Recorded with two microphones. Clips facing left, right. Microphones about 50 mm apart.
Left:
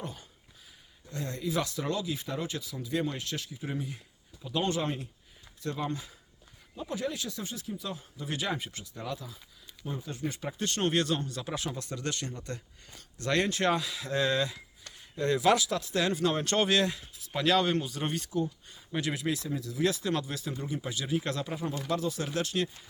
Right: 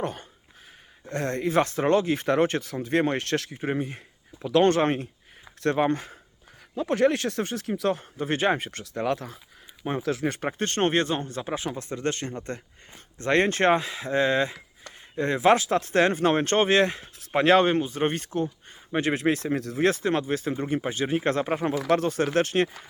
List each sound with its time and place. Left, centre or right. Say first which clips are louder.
0.0 s speech: right 10 dB; right
4.4 s speech: right 10 dB; right
5.5 s speech: right 11 dB; right
6.7 s speech: right 12 dB; right
8.8 s speech: right 11 dB; right
10.3 s speech: right 6 dB; right